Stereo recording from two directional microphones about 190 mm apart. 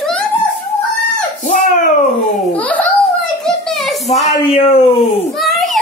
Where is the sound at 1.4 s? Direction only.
45° left (ahead or behind).